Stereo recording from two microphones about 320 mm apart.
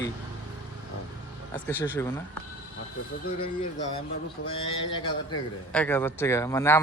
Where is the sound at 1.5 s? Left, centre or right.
Centre.